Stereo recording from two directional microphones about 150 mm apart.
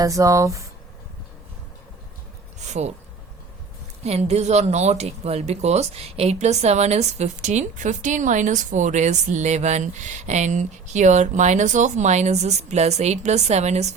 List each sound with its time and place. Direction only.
0.0 s speech: 20° right (ahead or behind)
2.6 s speech: 50° right (ahead or behind)
4.0 s speech: 45° right (ahead or behind)